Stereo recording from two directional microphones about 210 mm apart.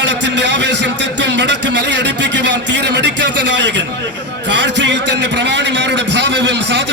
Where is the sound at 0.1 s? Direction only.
55° right (ahead or behind).